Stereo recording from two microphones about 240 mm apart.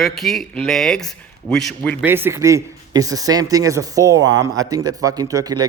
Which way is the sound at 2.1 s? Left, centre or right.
Centre.